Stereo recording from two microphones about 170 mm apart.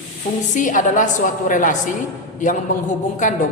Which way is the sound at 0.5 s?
50° left (ahead or behind).